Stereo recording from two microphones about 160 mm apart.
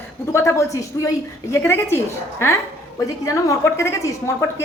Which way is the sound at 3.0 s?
20° left (ahead or behind).